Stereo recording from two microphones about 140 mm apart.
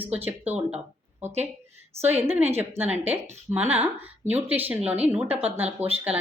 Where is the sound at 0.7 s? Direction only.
15° right (ahead or behind).